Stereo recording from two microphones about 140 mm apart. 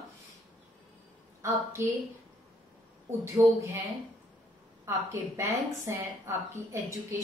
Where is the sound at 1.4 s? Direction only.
20° right (ahead or behind).